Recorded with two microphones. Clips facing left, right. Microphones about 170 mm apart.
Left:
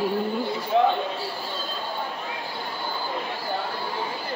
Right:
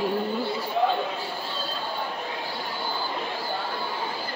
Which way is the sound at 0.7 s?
75° left (ahead or behind).